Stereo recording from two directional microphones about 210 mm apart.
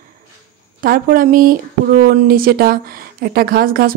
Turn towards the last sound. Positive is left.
turn(degrees=-45)  # may be behind; listen again after turning